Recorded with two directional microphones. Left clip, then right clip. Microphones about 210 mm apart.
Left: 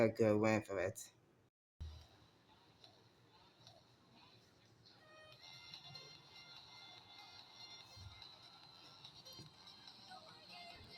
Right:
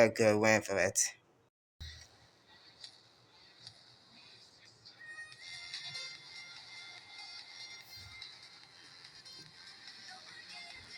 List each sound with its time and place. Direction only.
0.0 s speech: 5° right (ahead or behind)
1.8 s a sound: 15° right (ahead or behind)
5.3 s music: 15° right (ahead or behind)